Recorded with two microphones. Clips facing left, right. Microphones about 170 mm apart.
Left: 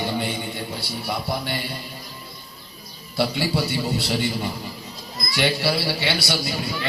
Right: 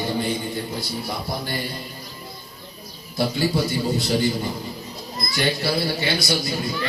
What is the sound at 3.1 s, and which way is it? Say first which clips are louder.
A man's voice: right 1 dB; 70° left (ahead or behind).